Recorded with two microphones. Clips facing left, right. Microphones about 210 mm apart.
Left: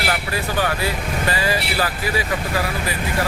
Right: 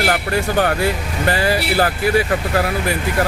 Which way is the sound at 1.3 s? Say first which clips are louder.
Right 6 dB; 60° right (ahead or behind).